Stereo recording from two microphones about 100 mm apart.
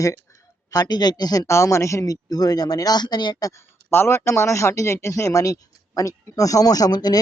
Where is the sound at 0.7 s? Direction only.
40° left (ahead or behind).